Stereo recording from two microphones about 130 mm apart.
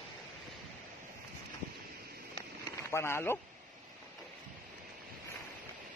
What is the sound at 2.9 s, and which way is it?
Speech, 20° left (ahead or behind).